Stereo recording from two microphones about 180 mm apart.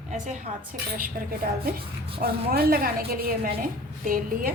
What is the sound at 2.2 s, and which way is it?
A woman's voice, 55° right (ahead or behind).